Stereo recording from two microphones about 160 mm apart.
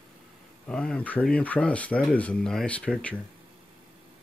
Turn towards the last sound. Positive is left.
turn(degrees=10)  # may be behind; listen again after turning